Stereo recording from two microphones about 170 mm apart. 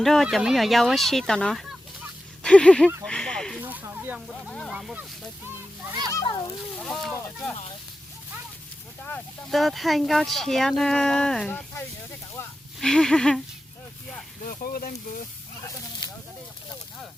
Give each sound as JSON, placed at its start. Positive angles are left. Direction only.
{"t": 0.0, "sound": "speech", "side_deg": 0}
{"t": 3.0, "sound": "a sound", "side_deg": 5}
{"t": 3.6, "sound": "snake", "side_deg": -10}
{"t": 4.7, "sound": "speech", "side_deg": -5}
{"t": 6.1, "sound": "a child's voice", "side_deg": 20}
{"t": 6.7, "sound": "speech", "side_deg": 5}
{"t": 9.5, "sound": "speech", "side_deg": 0}
{"t": 12.8, "sound": "speech", "side_deg": 5}
{"t": 14.4, "sound": "speech", "side_deg": 55}